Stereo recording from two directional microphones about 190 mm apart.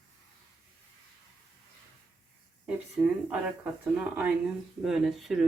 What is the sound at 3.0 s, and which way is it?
Speech, 10° right (ahead or behind).